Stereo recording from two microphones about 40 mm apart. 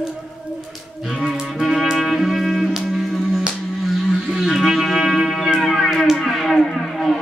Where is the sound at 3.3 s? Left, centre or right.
Centre.